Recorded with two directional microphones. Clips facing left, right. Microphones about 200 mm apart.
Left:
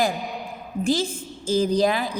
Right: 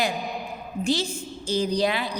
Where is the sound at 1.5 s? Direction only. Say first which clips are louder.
Left 4 dB; 50° left (ahead or behind).